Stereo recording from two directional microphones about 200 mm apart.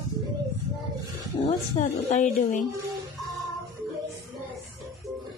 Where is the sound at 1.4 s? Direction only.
30° left (ahead or behind).